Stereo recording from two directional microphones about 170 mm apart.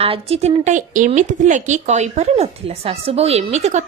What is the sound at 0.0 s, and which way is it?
Speech, 35° right (ahead or behind).